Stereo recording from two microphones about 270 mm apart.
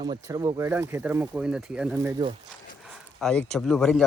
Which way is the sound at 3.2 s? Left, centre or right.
Centre.